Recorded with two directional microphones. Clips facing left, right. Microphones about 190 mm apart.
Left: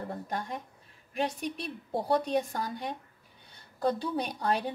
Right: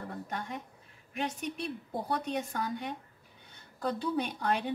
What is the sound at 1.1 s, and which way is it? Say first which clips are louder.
A woman's voice: left 3 dB; 35° left (ahead or behind).